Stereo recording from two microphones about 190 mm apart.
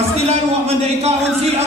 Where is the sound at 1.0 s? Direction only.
35° right (ahead or behind).